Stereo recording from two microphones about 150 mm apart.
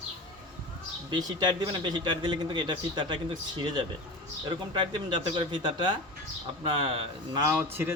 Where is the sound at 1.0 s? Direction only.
30° right (ahead or behind).